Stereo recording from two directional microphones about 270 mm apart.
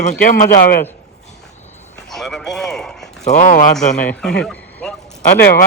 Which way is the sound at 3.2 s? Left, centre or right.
Left.